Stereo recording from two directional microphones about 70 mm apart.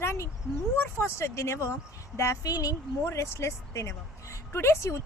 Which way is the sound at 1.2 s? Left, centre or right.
Left.